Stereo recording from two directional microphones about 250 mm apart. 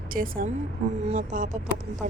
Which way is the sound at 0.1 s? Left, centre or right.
Right.